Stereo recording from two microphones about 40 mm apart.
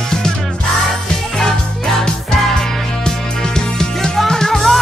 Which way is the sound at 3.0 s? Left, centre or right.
Centre.